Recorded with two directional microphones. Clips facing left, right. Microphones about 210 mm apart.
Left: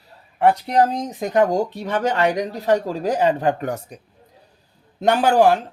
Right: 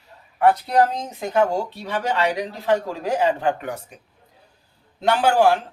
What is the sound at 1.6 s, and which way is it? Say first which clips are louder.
Speech: left 5 dB; 45° left (ahead or behind).